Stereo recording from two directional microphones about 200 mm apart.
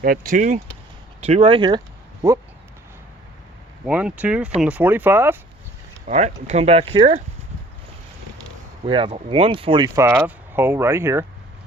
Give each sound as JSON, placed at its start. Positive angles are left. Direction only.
{"t": 0.0, "sound": "speech", "side_deg": -45}
{"t": 1.2, "sound": "speech", "side_deg": -30}
{"t": 3.8, "sound": "speech", "side_deg": -5}
{"t": 6.1, "sound": "speech", "side_deg": -35}
{"t": 8.9, "sound": "speech", "side_deg": -25}